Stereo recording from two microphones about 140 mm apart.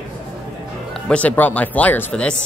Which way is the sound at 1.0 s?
10° left (ahead or behind).